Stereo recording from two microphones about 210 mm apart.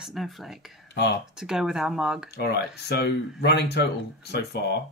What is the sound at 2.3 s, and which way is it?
Speech, 50° left (ahead or behind).